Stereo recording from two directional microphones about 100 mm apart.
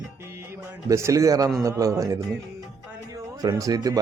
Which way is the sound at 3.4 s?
40° right (ahead or behind).